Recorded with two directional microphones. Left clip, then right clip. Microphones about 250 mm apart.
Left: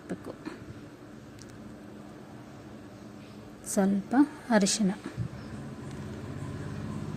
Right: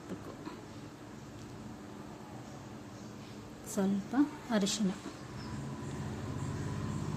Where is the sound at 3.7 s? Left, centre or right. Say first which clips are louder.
Left 7 dB; left.